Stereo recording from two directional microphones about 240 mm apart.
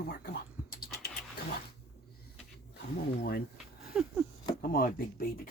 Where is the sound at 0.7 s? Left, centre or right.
Left.